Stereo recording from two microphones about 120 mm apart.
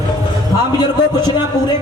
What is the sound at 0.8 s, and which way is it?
Speech, 35° left (ahead or behind).